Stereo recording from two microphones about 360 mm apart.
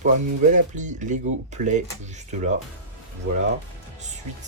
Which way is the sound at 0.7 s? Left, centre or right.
Centre.